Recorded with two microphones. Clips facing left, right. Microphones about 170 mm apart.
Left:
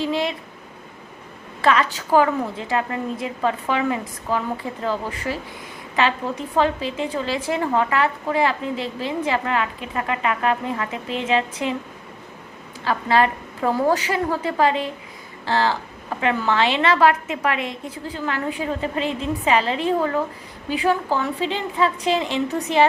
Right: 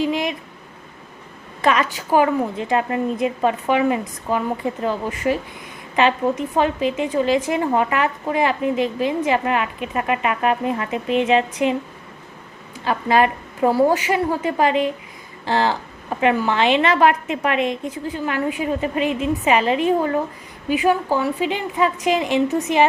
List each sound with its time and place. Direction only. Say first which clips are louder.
0.0 s a woman's voice: right 2 dB; 15° right (ahead or behind)
1.6 s a woman's voice: even; 15° right (ahead or behind)
12.8 s a woman's voice: right 2 dB; 15° right (ahead or behind)
22.4 s a woman's voice: right 4 dB; 10° left (ahead or behind)